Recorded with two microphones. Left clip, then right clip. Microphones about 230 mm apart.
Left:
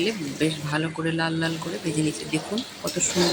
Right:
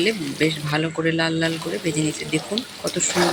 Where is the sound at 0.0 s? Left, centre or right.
Centre.